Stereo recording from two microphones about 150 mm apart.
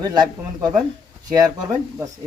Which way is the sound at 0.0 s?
25° right (ahead or behind).